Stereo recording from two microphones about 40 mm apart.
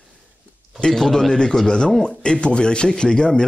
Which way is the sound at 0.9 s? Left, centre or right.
Centre.